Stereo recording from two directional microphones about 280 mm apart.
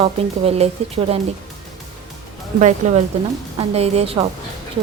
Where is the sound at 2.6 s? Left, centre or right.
Right.